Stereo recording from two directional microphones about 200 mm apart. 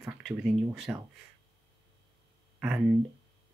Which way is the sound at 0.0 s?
5° right (ahead or behind).